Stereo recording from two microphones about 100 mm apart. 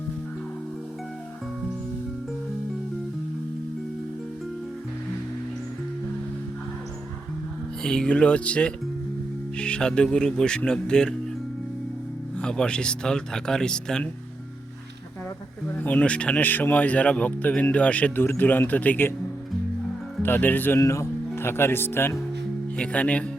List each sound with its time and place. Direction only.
7.8 s speech: 10° left (ahead or behind)
12.4 s speech: 10° left (ahead or behind)
15.7 s speech: 15° left (ahead or behind)
20.2 s speech: 20° left (ahead or behind)
20.7 s speech: 30° left (ahead or behind)
22.8 s speech: 15° left (ahead or behind)